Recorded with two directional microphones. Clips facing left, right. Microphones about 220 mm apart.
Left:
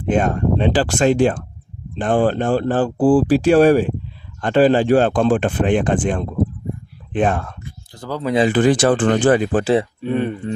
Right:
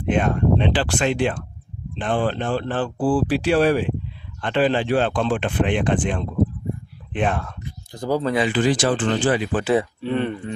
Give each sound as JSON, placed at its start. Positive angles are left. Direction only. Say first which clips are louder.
{"t": 0.0, "sound": "speech", "louder": "left 2 dB", "side_deg": 45}
{"t": 7.6, "sound": "a sound", "louder": "right 4 dB", "side_deg": -15}
{"t": 8.4, "sound": "speech", "louder": "left 5 dB", "side_deg": 55}
{"t": 10.0, "sound": "speech", "louder": "left 3 dB", "side_deg": 15}